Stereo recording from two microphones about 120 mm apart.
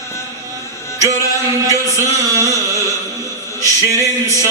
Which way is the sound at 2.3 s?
25° right (ahead or behind).